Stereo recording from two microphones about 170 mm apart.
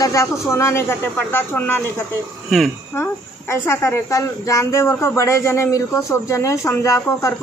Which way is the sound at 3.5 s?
15° left (ahead or behind).